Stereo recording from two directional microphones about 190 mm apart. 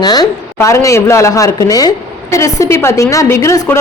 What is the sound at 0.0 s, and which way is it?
A woman's voice, 20° left (ahead or behind).